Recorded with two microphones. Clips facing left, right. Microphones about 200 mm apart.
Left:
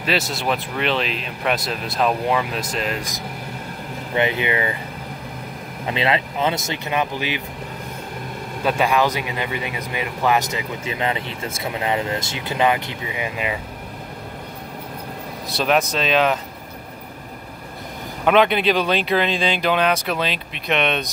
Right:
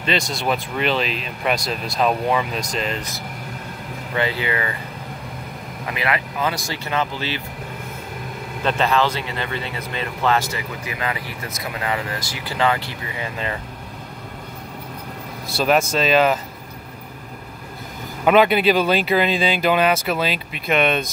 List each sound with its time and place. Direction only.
0.0 s speech: 5° left (ahead or behind)
4.1 s speech: 20° left (ahead or behind)
5.9 s speech: 25° left (ahead or behind)
8.6 s speech: 10° left (ahead or behind)
15.5 s speech: centre (ahead or behind)
18.2 s speech: 5° right (ahead or behind)